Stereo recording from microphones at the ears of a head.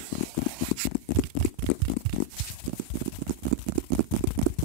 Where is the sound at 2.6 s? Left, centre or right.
Right.